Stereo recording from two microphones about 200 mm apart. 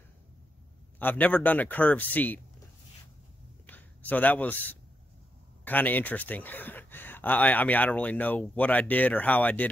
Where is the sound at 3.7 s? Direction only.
10° left (ahead or behind).